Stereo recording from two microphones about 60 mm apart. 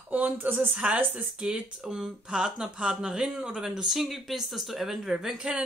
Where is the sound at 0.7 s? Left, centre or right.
Centre.